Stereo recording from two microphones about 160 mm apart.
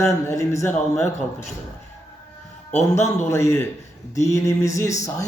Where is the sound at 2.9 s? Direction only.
15° left (ahead or behind).